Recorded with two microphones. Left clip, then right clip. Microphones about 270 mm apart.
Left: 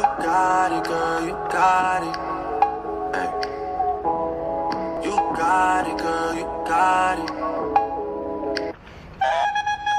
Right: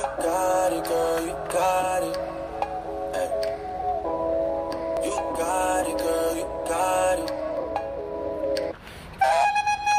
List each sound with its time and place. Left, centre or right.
0.0 s music: left
5.4 s music: left
9.2 s flute: centre